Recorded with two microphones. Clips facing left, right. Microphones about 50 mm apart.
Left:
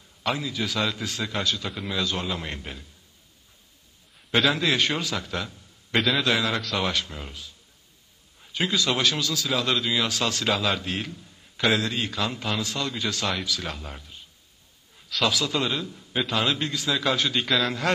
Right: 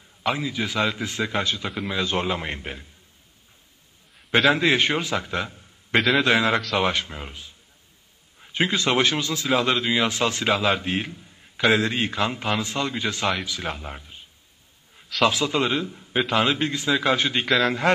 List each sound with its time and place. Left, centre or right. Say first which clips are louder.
0.2 s a man's voice: right 2 dB; right
4.5 s a man's voice: right 6 dB; right
5.9 s a man's voice: right 4 dB; centre
6.2 s a man's voice: right 4 dB; right
11.7 s a man's voice: right 4 dB; right
15.2 s a man's voice: right 4 dB; right
17.5 s a man's voice: right 6 dB; centre